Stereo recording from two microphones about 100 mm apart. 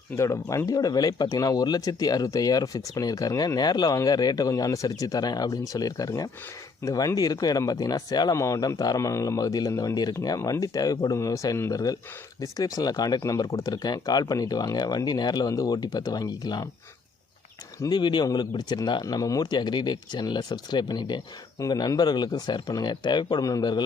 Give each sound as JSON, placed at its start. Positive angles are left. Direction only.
{"t": 0.2, "sound": "speech", "side_deg": 30}
{"t": 17.8, "sound": "speech", "side_deg": 45}
{"t": 19.0, "sound": "speech", "side_deg": 35}